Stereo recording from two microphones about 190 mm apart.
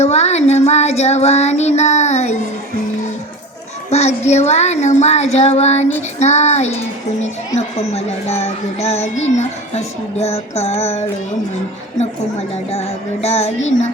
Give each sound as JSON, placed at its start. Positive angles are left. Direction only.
{"t": 0.0, "sound": "a child's voice", "side_deg": 35}
{"t": 3.8, "sound": "a child's voice", "side_deg": 35}
{"t": 13.2, "sound": "a child's voice", "side_deg": 35}